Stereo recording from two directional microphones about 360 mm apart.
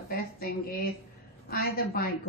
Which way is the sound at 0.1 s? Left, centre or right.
Left.